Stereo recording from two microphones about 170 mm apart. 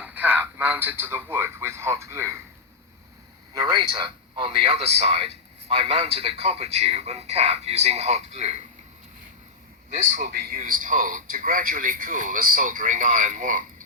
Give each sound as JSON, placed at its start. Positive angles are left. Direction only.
{"t": 0.0, "sound": "speech", "side_deg": -10}
{"t": 3.5, "sound": "a man's voice", "side_deg": -25}
{"t": 9.9, "sound": "speech", "side_deg": -45}
{"t": 10.3, "sound": "speech", "side_deg": -60}